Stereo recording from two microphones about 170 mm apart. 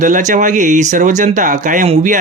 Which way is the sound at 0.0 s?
45° right (ahead or behind).